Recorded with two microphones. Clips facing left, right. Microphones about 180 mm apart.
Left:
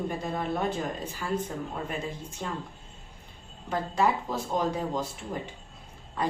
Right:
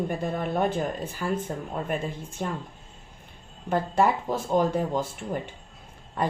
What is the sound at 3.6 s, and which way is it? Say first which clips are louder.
Speech: right 3 dB; 50° right (ahead or behind).